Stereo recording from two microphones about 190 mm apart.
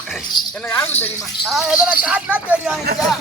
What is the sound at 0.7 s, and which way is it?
Cricket, 10° left (ahead or behind).